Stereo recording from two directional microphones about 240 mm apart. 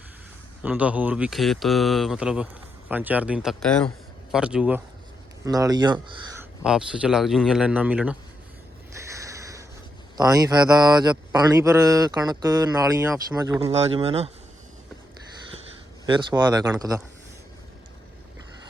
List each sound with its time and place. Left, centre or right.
0.6 s speech: centre
5.5 s speech: centre
6.7 s speech: centre
9.0 s a sound: centre
10.2 s speech: centre
13.8 s speech: right
16.0 s speech: centre